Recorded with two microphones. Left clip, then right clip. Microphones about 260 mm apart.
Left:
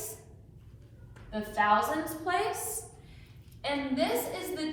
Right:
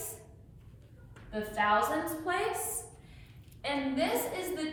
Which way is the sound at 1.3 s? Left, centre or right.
Centre.